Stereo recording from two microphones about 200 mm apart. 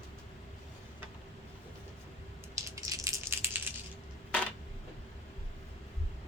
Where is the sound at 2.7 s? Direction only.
15° right (ahead or behind).